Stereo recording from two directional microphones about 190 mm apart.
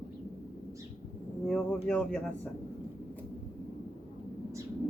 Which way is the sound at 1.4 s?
5° left (ahead or behind).